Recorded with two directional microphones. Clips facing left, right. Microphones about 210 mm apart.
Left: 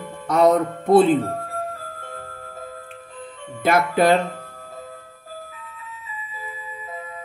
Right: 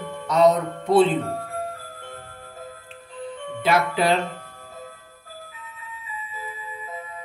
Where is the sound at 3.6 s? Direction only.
50° left (ahead or behind).